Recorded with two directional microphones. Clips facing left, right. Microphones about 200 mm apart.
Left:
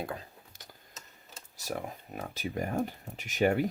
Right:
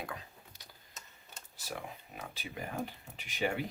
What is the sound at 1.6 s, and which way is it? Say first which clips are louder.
Speech: left 6 dB; 45° left (ahead or behind).